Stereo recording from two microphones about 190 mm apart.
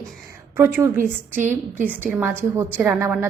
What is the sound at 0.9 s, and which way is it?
Speech, 45° right (ahead or behind).